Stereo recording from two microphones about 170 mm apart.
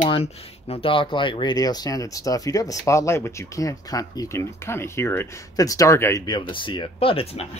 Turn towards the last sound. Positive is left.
turn(degrees=35)  # may be behind; listen again after turning